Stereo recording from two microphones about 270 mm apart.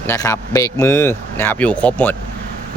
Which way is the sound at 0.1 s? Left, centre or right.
Centre.